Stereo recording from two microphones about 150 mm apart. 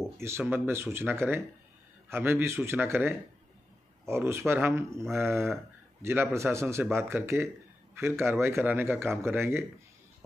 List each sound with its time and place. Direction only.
0.2 s speech: 15° right (ahead or behind)